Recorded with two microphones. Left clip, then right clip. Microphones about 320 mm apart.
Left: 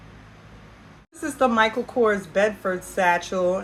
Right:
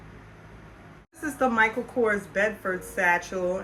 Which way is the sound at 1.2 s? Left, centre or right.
Centre.